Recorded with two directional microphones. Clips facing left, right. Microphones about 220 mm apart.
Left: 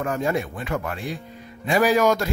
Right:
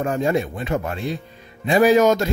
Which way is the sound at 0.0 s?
25° right (ahead or behind).